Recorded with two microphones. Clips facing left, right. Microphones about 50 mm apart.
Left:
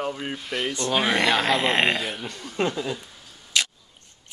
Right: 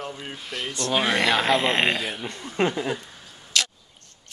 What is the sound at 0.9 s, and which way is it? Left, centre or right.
Speech, centre.